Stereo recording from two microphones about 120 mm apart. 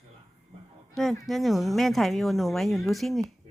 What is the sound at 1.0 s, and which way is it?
Speech, 5° left (ahead or behind).